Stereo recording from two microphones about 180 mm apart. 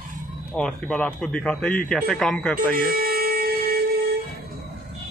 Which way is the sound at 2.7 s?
55° right (ahead or behind).